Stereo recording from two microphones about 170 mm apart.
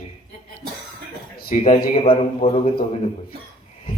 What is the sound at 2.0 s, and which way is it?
Speech, 35° left (ahead or behind).